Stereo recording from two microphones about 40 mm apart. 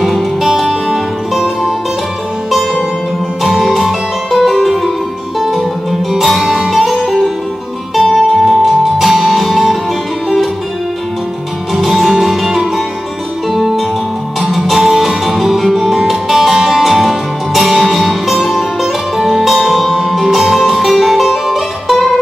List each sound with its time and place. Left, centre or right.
0.0 s music: centre
4.3 s music: centre
11.7 s music: centre